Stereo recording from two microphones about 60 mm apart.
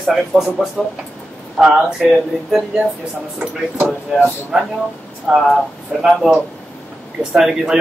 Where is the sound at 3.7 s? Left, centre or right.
Right.